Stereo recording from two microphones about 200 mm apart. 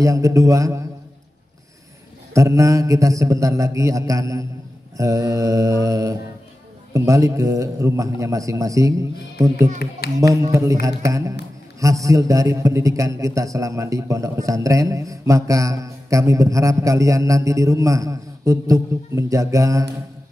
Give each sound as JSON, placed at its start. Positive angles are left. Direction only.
{"t": 0.0, "sound": "a man's voice", "side_deg": -15}
{"t": 2.3, "sound": "a man's voice", "side_deg": -15}
{"t": 9.8, "sound": "speech", "side_deg": 50}
{"t": 10.1, "sound": "a man's voice", "side_deg": -15}